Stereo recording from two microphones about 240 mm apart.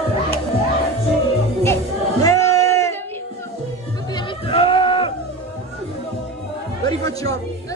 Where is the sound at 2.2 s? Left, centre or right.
Centre.